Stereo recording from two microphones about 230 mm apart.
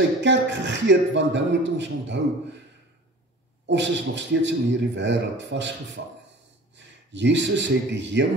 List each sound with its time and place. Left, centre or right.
0.2 s a man's voice: right
3.6 s a man's voice: right
7.1 s a man's voice: right